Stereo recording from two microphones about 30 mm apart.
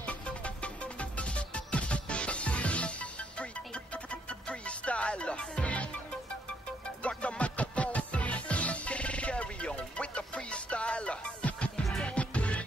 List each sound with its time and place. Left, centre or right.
0.6 s music: left
7.0 s music: left